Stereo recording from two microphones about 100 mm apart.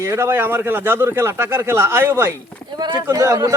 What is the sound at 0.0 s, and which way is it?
Speech, 30° right (ahead or behind).